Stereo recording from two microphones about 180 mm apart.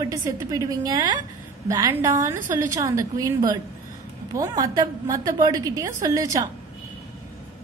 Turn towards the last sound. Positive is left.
turn(degrees=-20)  # may be behind; listen again after turning